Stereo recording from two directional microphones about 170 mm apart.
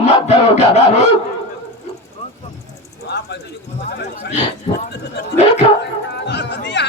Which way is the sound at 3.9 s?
75° left (ahead or behind).